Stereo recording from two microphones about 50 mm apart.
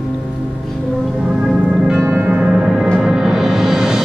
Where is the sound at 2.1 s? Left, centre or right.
Right.